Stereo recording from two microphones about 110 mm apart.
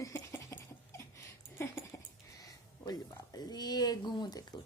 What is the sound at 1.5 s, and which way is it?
Dog, 25° left (ahead or behind).